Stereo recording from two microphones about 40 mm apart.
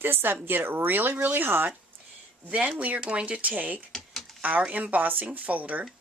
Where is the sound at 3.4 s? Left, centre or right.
Right.